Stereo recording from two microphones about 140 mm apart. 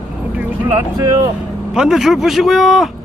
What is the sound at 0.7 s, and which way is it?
Speech, 25° right (ahead or behind).